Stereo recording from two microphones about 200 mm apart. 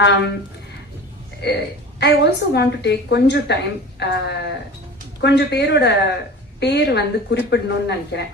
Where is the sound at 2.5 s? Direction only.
55° left (ahead or behind).